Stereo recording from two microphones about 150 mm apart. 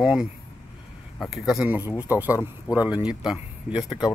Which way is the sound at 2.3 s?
20° left (ahead or behind).